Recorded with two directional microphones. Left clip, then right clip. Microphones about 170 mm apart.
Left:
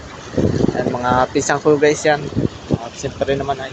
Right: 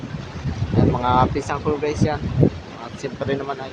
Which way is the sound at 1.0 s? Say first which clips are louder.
Left 4 dB; 15° left (ahead or behind).